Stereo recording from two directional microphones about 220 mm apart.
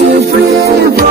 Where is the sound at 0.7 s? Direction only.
45° right (ahead or behind).